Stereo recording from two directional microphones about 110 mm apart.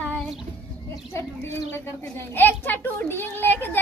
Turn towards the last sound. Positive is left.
turn(degrees=20)  # may be behind; listen again after turning